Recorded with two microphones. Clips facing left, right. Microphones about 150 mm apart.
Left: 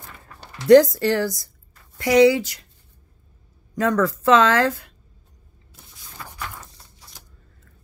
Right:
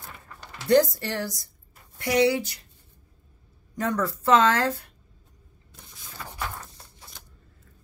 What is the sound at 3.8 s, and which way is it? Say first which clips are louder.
Speech: left 6 dB; 90° left.